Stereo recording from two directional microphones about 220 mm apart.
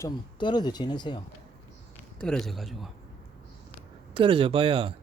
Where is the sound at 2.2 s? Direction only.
Centre (ahead or behind).